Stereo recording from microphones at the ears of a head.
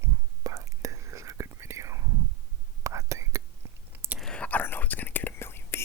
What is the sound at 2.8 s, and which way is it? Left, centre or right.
Whispering, right.